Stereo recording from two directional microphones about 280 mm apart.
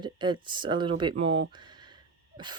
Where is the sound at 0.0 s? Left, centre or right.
Centre.